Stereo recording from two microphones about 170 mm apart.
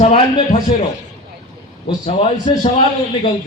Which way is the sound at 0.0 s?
40° left (ahead or behind).